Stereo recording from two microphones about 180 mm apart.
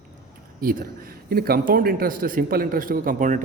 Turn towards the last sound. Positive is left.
turn(degrees=-45)  # may be behind; listen again after turning